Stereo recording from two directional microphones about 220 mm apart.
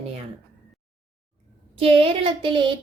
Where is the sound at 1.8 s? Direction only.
25° right (ahead or behind).